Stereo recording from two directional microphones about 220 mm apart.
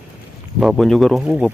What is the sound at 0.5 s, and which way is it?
Speech, centre (ahead or behind).